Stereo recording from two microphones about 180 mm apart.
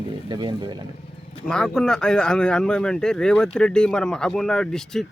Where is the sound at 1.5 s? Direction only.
5° left (ahead or behind).